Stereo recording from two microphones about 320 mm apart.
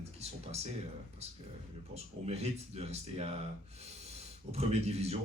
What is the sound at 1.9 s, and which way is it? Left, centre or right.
Speech, centre.